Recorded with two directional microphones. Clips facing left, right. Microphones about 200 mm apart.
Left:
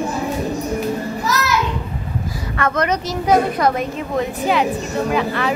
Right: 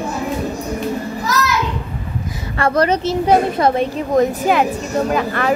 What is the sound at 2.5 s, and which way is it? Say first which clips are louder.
A woman's voice: right 4 dB; 30° right (ahead or behind).